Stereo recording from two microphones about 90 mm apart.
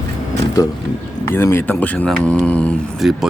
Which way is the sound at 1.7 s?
15° left (ahead or behind).